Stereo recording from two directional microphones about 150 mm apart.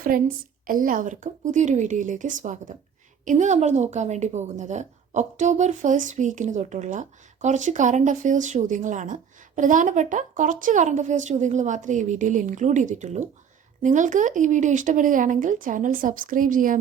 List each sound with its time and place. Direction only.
0.1 s a woman's voice: 75° right (ahead or behind)
0.7 s a woman's voice: 65° right (ahead or behind)